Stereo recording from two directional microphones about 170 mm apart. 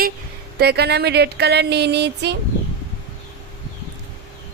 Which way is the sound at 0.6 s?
70° right (ahead or behind).